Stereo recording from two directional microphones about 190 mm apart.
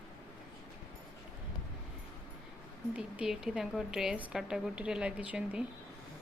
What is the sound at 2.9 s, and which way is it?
A woman's voice, 5° right (ahead or behind).